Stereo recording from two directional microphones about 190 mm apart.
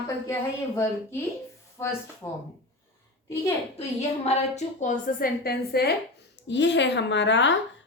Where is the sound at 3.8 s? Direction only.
35° left (ahead or behind); by 5.9 s 55° left (ahead or behind).